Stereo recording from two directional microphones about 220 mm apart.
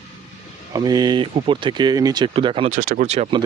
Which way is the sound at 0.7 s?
15° right (ahead or behind).